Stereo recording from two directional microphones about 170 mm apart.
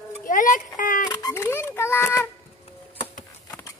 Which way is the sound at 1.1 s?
20° left (ahead or behind).